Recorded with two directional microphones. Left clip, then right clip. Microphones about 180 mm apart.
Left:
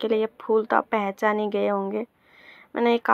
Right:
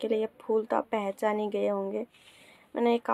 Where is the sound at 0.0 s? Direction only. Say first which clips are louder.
Left 5 dB; 15° left (ahead or behind).